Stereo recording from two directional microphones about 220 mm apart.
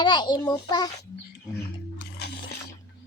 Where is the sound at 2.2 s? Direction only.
50° left (ahead or behind).